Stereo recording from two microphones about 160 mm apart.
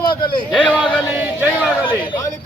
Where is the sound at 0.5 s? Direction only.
10° left (ahead or behind).